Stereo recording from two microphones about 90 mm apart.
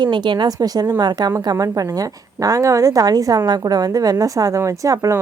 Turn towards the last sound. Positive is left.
turn(degrees=-40)  # may be behind; listen again after turning